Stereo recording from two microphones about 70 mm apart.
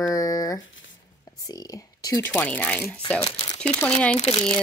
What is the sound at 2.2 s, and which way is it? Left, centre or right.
Speech, left.